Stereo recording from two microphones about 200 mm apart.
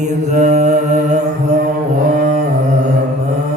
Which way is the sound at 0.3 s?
40° right (ahead or behind).